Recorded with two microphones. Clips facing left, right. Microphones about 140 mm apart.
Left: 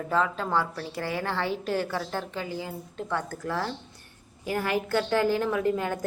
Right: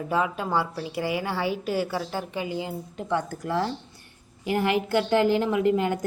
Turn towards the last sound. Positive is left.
turn(degrees=-20)  # may be behind; listen again after turning